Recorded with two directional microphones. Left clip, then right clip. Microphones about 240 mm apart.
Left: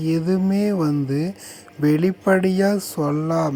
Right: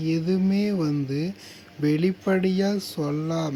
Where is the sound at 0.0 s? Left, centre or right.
Centre.